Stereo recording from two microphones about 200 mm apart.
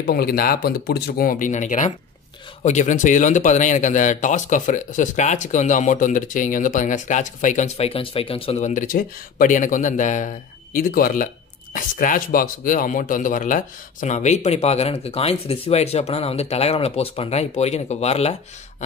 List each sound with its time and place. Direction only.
0.0 s speech: 50° left (ahead or behind); by 18.3 s 30° left (ahead or behind)